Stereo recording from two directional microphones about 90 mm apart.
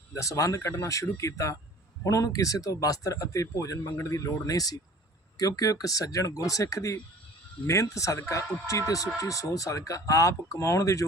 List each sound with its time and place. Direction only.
0.1 s speech: 35° left (ahead or behind)